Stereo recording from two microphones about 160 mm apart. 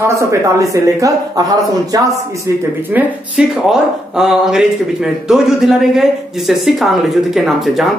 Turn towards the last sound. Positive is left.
turn(degrees=0)  # may be behind; listen again after turning